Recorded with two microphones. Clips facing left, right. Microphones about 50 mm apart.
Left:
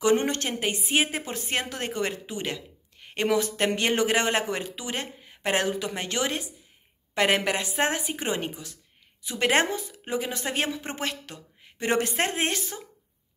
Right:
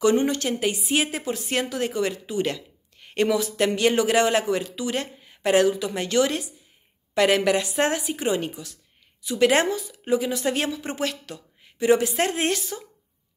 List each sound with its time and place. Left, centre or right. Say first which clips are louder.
0.0 s a woman's voice: right 3 dB; left
3.3 s a woman's voice: left 1 dB; left
12.2 s a woman's voice: right 3 dB; left